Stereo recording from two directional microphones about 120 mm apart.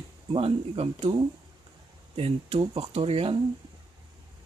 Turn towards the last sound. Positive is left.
turn(degrees=-50)  # may be behind; listen again after turning